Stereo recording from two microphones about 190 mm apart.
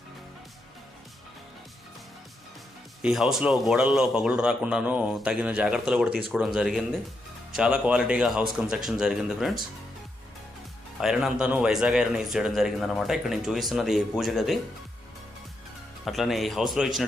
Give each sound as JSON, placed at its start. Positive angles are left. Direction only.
{"t": 3.0, "sound": "a man's voice", "side_deg": 0}
{"t": 11.0, "sound": "a man's voice", "side_deg": 0}
{"t": 16.0, "sound": "a man's voice", "side_deg": 0}